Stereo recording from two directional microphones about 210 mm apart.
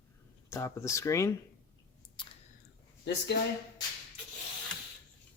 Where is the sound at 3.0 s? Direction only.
50° left (ahead or behind).